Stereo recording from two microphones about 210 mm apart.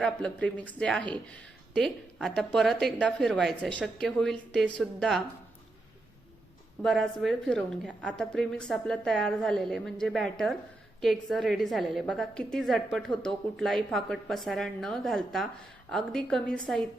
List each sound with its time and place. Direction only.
0.0 s a woman's voice: 5° left (ahead or behind)
6.8 s a woman's voice: centre (ahead or behind)